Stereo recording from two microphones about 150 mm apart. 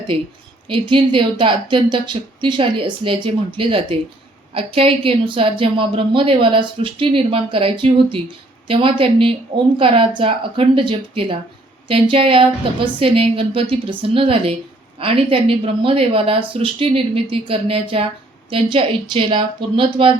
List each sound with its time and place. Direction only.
0.7 s a woman's voice: 35° right (ahead or behind)